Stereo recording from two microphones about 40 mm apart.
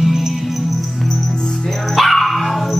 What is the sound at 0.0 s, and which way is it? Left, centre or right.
Music, centre.